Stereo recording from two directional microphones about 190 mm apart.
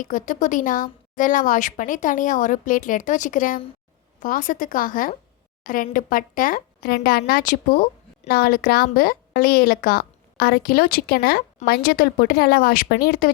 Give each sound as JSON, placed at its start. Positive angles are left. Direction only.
{"t": 0.0, "sound": "a woman's voice", "side_deg": 45}